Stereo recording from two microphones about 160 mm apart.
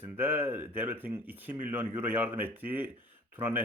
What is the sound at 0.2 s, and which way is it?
A man's voice, 10° right (ahead or behind).